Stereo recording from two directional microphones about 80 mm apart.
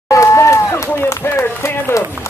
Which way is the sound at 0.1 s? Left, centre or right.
Left.